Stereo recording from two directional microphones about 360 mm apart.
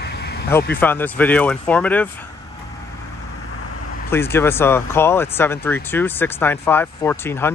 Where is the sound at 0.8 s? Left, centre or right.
Centre.